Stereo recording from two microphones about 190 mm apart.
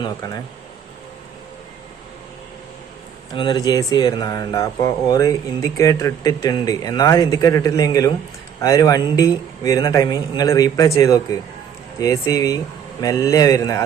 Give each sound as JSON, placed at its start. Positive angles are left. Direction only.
{"t": 0.0, "sound": "speech", "side_deg": 20}
{"t": 3.3, "sound": "speech", "side_deg": 25}